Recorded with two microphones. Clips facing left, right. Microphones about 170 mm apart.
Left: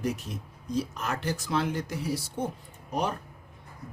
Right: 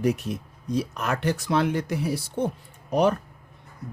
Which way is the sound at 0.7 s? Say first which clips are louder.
Right 4 dB; 65° right (ahead or behind).